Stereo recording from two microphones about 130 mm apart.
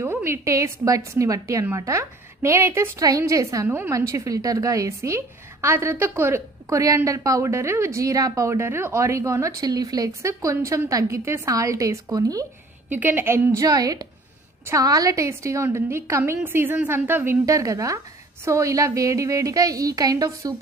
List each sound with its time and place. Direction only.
0.0 s a woman's voice: 20° right (ahead or behind)
3.6 s a woman's voice: 15° right (ahead or behind)
4.1 s a woman's voice: 25° right (ahead or behind)
12.9 s a woman's voice: 15° right (ahead or behind)